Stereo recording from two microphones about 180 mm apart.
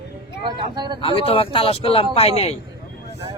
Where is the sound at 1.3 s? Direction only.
30° left (ahead or behind).